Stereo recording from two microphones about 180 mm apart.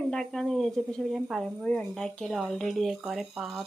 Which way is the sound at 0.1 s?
Centre (ahead or behind).